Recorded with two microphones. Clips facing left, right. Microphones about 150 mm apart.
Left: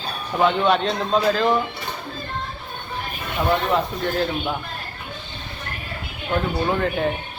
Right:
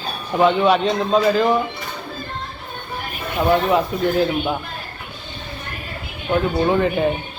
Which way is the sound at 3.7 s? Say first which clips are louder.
Right 4 dB; 5° right (ahead or behind).